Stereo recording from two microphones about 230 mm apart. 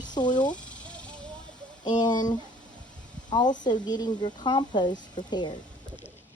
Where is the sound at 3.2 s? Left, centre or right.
Centre.